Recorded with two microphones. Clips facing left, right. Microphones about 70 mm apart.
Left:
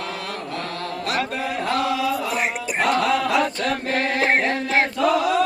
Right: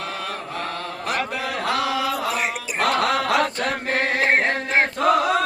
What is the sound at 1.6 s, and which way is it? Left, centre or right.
Chant, right.